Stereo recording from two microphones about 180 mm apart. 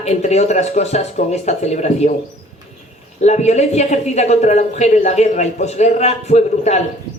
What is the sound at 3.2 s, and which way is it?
Speech, 40° left (ahead or behind).